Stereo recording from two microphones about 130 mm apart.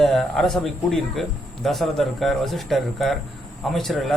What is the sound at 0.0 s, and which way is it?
Speech, 5° left (ahead or behind).